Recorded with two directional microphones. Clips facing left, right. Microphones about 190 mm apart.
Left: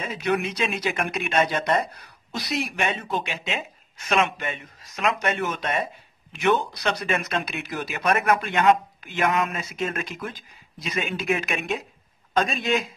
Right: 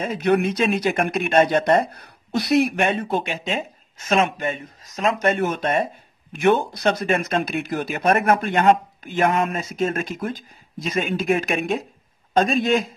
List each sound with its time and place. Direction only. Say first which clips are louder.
0.0 s speech: right 6 dB; 50° right (ahead or behind)